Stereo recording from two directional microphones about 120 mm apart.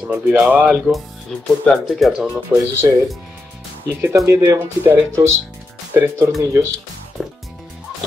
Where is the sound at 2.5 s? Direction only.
15° right (ahead or behind).